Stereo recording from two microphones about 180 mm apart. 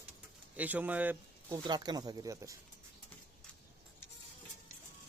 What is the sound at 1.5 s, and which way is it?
Speech, 25° right (ahead or behind).